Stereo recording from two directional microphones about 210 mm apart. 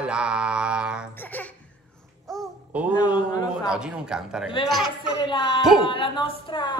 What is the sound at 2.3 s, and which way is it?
Babbling, 5° right (ahead or behind).